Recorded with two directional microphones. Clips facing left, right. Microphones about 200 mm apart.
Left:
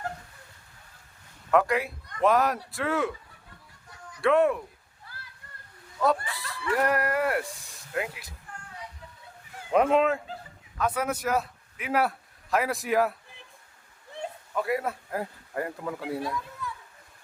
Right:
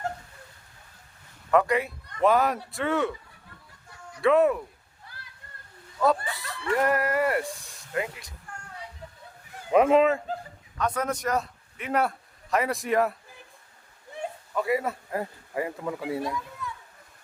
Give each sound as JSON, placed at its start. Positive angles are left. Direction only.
{"t": 1.5, "sound": "speech", "side_deg": 0}
{"t": 4.2, "sound": "speech", "side_deg": 0}
{"t": 6.0, "sound": "speech", "side_deg": 0}
{"t": 9.7, "sound": "a man's voice", "side_deg": 0}
{"t": 14.5, "sound": "speech", "side_deg": 0}